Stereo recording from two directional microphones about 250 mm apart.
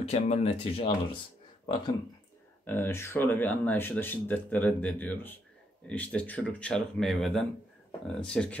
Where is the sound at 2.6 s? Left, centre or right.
Centre.